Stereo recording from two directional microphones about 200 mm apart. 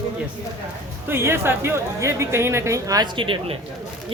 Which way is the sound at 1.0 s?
10° right (ahead or behind).